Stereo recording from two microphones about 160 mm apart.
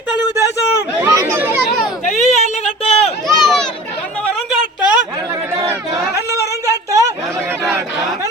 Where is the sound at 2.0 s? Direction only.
45° left (ahead or behind).